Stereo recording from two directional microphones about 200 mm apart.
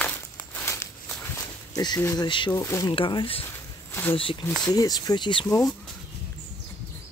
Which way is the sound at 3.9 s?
10° left (ahead or behind).